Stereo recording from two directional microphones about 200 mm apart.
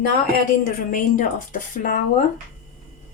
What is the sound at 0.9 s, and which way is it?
Speech, 45° left (ahead or behind).